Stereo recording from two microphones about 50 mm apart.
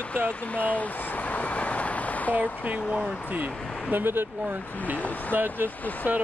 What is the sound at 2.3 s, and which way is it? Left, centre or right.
Speech, right.